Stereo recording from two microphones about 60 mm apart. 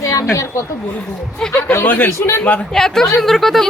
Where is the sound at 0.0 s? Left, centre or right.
Left.